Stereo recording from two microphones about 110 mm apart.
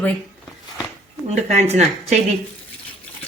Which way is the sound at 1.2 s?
80° right.